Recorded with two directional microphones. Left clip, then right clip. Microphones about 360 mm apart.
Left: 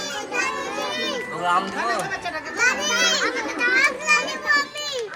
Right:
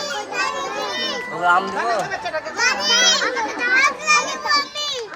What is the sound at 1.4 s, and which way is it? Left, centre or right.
Speech, right.